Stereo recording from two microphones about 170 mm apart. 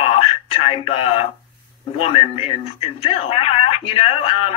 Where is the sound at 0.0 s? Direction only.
35° left (ahead or behind).